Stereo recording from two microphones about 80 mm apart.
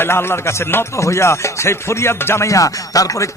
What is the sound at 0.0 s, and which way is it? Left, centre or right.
Music, left.